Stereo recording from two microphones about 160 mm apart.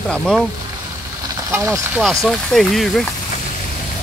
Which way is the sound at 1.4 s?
20° right (ahead or behind).